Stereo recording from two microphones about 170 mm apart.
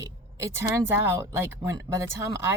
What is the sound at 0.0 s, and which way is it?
A woman's voice, 15° right (ahead or behind).